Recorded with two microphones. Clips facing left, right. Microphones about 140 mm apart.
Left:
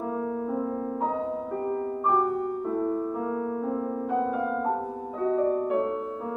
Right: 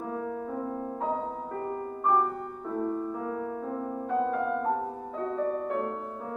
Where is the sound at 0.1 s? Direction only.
20° left (ahead or behind).